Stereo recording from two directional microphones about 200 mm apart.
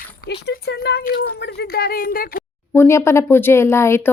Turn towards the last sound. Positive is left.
turn(degrees=10)  # may be behind; listen again after turning